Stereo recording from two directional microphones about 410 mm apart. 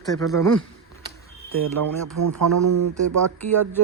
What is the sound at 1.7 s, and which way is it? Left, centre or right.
Speech, right.